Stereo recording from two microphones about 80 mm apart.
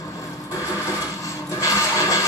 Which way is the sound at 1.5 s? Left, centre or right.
Left.